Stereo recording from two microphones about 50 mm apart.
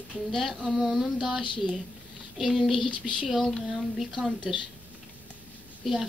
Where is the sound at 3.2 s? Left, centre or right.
Centre.